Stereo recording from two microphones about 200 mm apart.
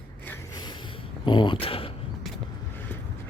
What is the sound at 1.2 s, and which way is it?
Speech, 25° left (ahead or behind).